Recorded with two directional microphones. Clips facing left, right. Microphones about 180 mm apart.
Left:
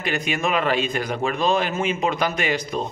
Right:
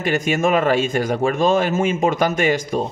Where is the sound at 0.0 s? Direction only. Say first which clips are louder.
Right 6 dB; 45° right (ahead or behind).